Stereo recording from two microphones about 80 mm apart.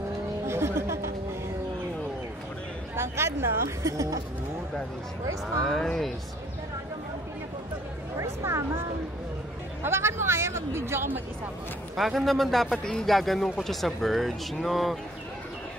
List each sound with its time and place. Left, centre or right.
0.5 s music: right
3.0 s speech: right
5.6 s speech: centre
8.2 s speech: right
9.8 s speech: right
12.0 s speech: centre